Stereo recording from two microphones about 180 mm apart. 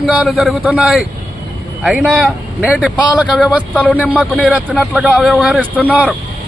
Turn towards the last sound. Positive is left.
turn(degrees=-10)  # may be behind; listen again after turning